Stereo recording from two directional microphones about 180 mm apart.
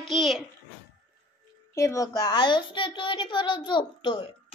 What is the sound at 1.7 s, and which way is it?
A child's voice, 15° left (ahead or behind).